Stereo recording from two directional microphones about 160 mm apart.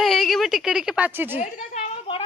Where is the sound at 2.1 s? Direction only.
35° left (ahead or behind).